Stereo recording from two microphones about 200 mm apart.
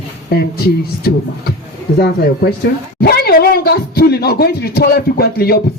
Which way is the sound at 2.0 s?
50° left (ahead or behind).